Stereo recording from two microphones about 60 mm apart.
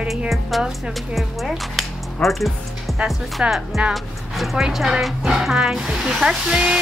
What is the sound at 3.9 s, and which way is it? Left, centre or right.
Speech, centre.